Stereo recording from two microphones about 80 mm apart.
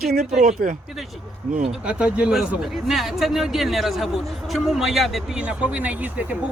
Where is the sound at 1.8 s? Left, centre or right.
Centre.